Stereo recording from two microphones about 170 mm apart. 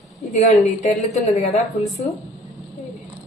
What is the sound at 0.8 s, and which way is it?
A woman's voice, 40° left (ahead or behind).